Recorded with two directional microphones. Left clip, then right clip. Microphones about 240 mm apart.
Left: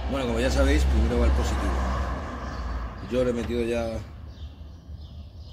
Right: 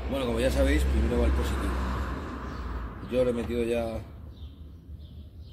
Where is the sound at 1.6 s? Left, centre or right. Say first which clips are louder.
Left 4 dB; left.